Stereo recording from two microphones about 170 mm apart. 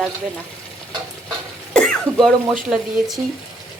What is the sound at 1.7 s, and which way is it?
Speech, 5° left (ahead or behind).